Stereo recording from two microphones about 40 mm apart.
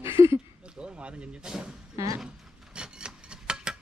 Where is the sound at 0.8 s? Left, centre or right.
Right.